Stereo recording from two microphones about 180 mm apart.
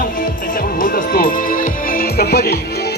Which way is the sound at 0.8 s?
50° left (ahead or behind).